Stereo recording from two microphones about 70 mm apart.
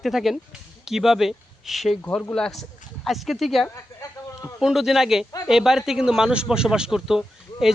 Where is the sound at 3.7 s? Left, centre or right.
Left.